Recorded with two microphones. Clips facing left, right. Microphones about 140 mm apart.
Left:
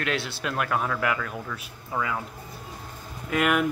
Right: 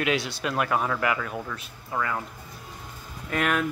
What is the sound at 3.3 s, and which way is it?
Speech, 5° left (ahead or behind).